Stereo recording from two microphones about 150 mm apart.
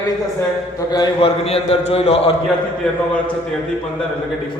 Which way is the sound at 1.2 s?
40° left (ahead or behind).